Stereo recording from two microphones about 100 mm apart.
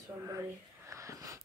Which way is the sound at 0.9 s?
30° right (ahead or behind).